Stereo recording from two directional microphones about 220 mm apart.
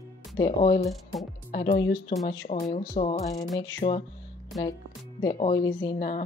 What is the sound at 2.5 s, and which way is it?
Speech, 30° left (ahead or behind).